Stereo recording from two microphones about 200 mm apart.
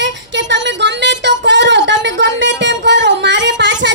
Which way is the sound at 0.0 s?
60° right (ahead or behind).